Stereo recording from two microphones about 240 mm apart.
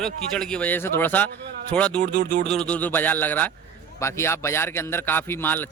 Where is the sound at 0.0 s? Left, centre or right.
Centre.